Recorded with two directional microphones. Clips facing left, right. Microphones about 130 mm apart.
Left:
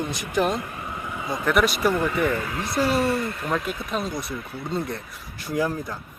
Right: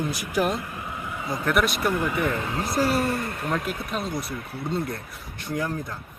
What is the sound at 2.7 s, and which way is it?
Speech, 45° right (ahead or behind).